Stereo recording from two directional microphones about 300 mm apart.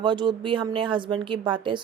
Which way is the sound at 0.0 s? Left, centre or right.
Centre.